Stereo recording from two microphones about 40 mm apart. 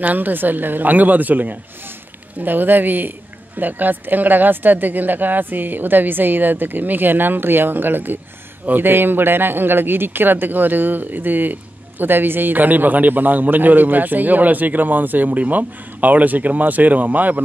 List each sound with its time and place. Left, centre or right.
0.0 s a man's voice: right